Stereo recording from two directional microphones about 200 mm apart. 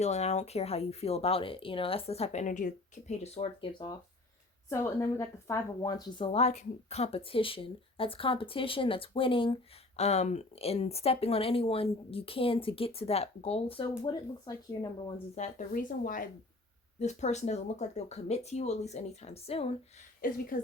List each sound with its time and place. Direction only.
0.0 s a woman's voice: 35° left (ahead or behind)
15.4 s speech: 40° left (ahead or behind)
20.2 s speech: 45° left (ahead or behind)